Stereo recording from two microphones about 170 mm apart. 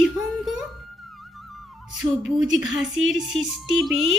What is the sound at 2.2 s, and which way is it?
Speech, 5° right (ahead or behind).